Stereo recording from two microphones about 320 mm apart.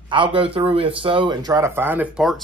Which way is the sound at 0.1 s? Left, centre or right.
Centre.